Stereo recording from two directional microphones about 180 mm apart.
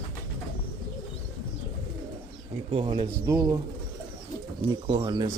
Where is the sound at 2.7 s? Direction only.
30° right (ahead or behind).